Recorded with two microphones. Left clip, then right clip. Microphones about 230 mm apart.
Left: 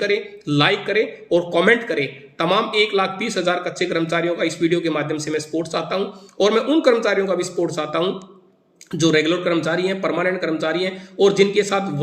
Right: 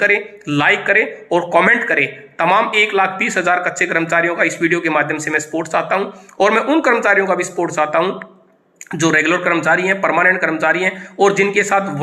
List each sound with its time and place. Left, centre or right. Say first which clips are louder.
0.0 s speech: right 6 dB; centre